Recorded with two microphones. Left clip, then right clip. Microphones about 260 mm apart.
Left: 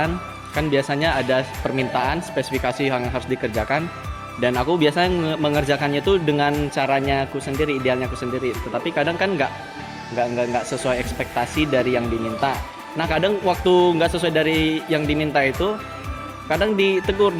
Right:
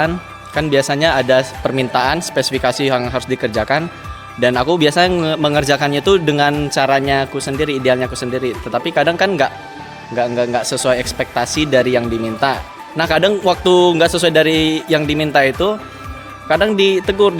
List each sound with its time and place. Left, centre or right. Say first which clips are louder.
0.5 s speech: right 6 dB; right